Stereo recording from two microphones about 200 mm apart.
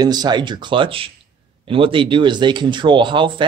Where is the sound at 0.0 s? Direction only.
20° right (ahead or behind).